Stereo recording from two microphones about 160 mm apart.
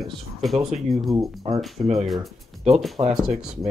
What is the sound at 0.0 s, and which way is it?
Speech, centre (ahead or behind).